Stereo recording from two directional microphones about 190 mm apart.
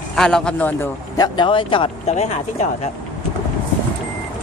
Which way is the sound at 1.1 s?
20° left (ahead or behind).